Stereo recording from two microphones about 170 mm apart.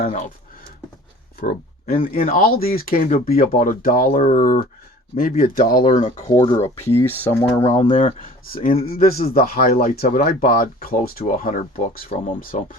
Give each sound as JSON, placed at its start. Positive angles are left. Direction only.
{"t": 0.0, "sound": "speech", "side_deg": 50}
{"t": 1.4, "sound": "a sound", "side_deg": 55}
{"t": 2.0, "sound": "speech", "side_deg": 55}
{"t": 6.0, "sound": "speech", "side_deg": 30}
{"t": 6.4, "sound": "speech", "side_deg": 20}
{"t": 7.9, "sound": "speech", "side_deg": 50}
{"t": 8.7, "sound": "speech", "side_deg": 35}
{"t": 9.0, "sound": "speech", "side_deg": 60}